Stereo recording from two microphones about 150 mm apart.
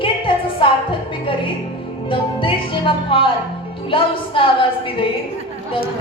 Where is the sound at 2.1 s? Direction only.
35° left (ahead or behind).